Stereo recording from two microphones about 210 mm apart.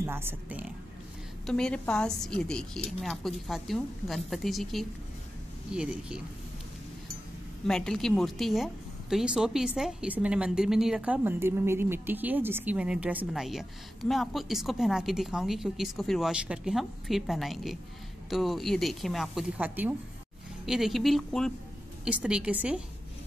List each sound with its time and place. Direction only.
0.0 s speech: 10° right (ahead or behind)
1.4 s a woman's voice: 5° left (ahead or behind)
7.6 s a woman's voice: centre (ahead or behind)